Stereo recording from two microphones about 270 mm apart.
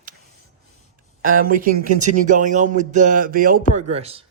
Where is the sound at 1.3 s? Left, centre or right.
Right.